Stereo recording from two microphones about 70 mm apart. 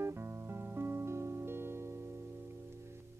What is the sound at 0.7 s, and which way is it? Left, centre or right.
Music, right.